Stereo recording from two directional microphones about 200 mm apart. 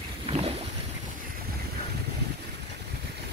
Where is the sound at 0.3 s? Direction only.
30° right (ahead or behind).